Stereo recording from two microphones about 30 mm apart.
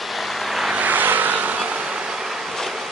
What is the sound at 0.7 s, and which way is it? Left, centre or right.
Vehicle, right.